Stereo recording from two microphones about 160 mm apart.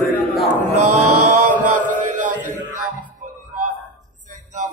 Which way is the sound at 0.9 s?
50° right (ahead or behind).